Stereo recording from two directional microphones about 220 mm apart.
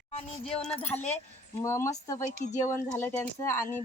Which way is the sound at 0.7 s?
25° left (ahead or behind).